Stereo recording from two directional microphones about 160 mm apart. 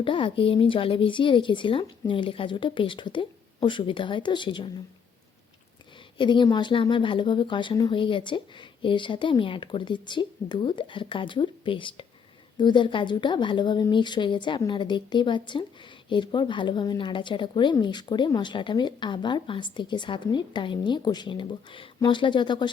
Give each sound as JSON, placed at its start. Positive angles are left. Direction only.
{"t": 0.0, "sound": "a woman's voice", "side_deg": 35}
{"t": 6.1, "sound": "a woman's voice", "side_deg": 30}